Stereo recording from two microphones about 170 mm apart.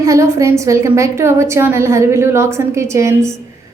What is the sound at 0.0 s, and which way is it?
A woman's voice, 20° right (ahead or behind).